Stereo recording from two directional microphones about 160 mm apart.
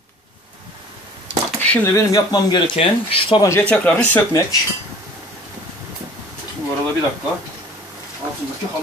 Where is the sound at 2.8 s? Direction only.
35° left (ahead or behind).